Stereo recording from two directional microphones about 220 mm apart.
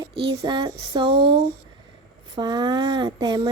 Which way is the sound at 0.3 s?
20° right (ahead or behind).